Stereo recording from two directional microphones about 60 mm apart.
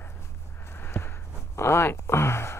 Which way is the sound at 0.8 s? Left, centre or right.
Left.